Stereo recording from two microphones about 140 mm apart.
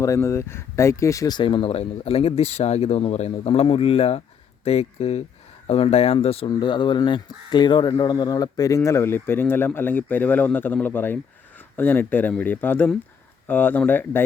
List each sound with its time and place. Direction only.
0.0 s speech: 20° left (ahead or behind)